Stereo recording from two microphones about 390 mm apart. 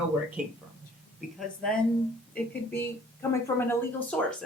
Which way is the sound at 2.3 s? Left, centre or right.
Centre.